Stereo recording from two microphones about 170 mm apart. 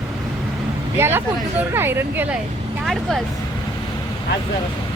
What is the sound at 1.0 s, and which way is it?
Speech, 10° right (ahead or behind).